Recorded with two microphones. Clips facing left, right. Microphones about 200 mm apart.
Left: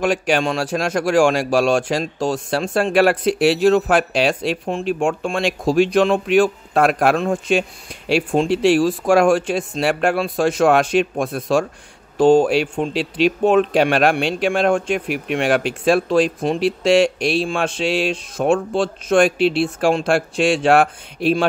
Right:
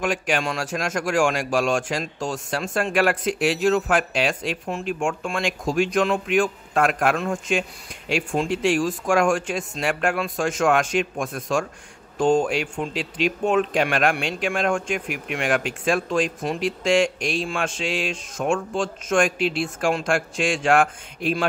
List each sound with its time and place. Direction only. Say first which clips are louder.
0.0 s a man's voice: left 6 dB; 35° left (ahead or behind)